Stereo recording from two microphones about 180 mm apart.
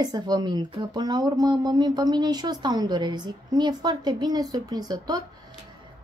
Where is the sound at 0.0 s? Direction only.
25° right (ahead or behind).